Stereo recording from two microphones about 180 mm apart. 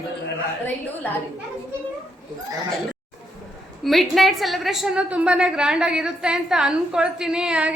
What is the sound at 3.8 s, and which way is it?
A woman's voice, centre (ahead or behind).